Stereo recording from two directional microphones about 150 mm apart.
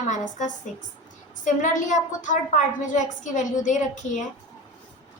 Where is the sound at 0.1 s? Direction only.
55° left (ahead or behind).